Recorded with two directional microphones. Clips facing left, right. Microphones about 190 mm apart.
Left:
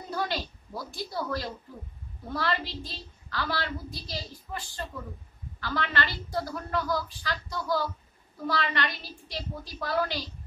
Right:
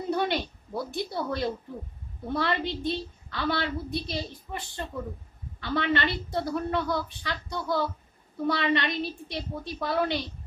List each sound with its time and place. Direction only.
0.1 s a woman's voice: 25° right (ahead or behind)